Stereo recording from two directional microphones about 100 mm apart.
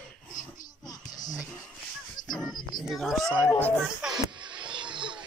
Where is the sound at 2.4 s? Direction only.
45° left (ahead or behind).